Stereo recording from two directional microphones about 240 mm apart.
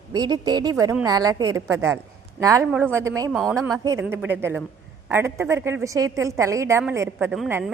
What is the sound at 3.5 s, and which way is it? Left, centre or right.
A woman's voice, centre.